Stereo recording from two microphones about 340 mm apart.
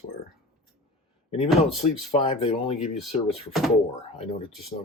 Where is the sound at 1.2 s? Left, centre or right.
Centre.